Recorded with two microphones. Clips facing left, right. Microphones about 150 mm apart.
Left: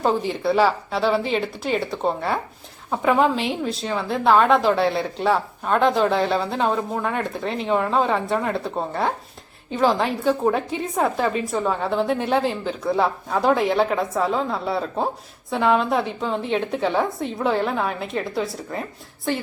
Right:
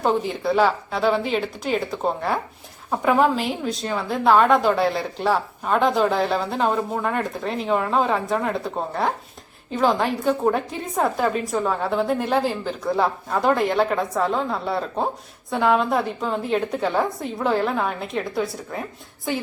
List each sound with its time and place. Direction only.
0.0 s a woman's voice: centre (ahead or behind)